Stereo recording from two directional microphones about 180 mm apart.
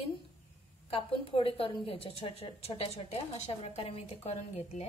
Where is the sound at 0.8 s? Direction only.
30° left (ahead or behind).